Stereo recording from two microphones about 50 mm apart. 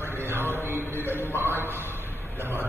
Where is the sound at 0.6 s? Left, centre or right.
Right.